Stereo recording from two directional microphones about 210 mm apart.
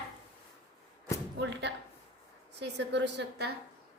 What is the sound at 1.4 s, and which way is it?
A woman's voice, 55° right (ahead or behind).